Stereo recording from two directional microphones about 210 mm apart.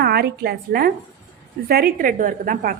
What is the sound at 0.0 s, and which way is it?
A woman's voice, 50° right (ahead or behind).